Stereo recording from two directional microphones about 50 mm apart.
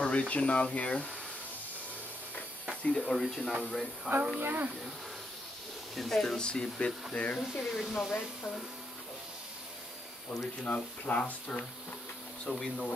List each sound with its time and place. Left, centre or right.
0.0 s speech: left
3.0 s speech: centre
4.4 s speech: right
5.9 s speech: centre; by 7.4 s left
7.5 s speech: centre
10.6 s speech: left
12.4 s speech: centre